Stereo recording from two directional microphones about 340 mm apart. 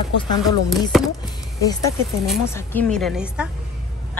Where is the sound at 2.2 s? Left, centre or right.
Centre.